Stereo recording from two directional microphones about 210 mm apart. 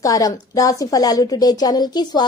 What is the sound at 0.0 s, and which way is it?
A woman's voice, 15° left (ahead or behind).